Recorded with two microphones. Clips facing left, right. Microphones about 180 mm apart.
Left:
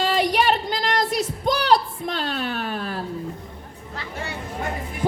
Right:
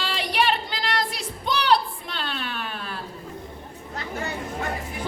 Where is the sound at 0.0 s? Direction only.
45° left (ahead or behind).